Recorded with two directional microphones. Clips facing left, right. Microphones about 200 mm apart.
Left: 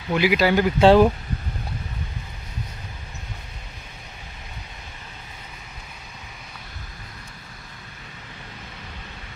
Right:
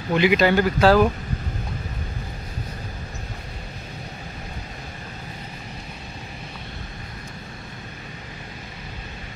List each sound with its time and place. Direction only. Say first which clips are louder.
0.1 s speech: right 1 dB; 5° left (ahead or behind)
0.7 s speech: left 4 dB; 25° left (ahead or behind)